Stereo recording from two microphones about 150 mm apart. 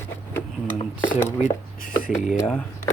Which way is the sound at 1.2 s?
60° left (ahead or behind).